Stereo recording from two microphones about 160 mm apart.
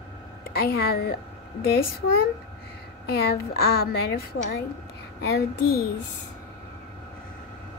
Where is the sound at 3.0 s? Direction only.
75° left (ahead or behind).